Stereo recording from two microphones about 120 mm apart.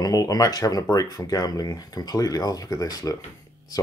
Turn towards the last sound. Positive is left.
turn(degrees=30)  # may be behind; listen again after turning